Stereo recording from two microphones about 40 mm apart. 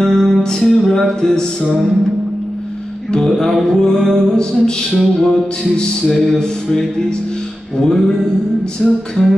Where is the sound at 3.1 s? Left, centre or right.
Centre.